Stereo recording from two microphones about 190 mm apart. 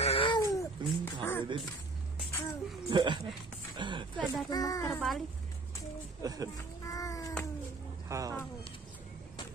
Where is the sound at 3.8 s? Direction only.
25° right (ahead or behind).